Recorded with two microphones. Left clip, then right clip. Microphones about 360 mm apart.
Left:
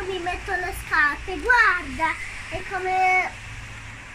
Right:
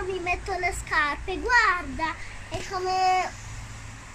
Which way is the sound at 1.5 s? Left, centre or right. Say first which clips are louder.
Left 3 dB; centre.